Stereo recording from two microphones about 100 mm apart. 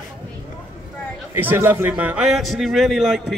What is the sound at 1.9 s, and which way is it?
Speech, 15° right (ahead or behind).